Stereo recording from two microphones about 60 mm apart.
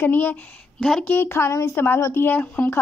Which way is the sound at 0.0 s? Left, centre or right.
Left.